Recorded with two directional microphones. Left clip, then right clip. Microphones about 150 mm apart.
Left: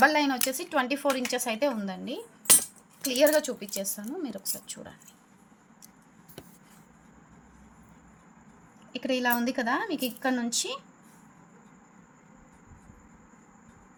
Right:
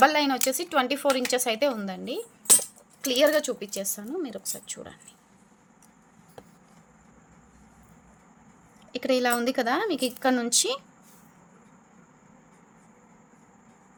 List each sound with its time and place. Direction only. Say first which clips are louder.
0.0 s a woman's voice: right 2 dB; 35° right (ahead or behind)
8.9 s speech: right 3 dB; 50° right (ahead or behind)